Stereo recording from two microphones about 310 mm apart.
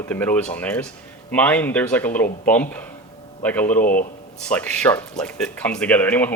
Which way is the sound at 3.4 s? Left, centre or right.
Centre.